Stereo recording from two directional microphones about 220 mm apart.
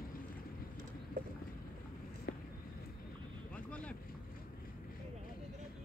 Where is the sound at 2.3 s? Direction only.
55° left (ahead or behind).